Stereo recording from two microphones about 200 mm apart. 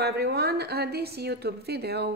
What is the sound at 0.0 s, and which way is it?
A woman's voice, 55° right (ahead or behind).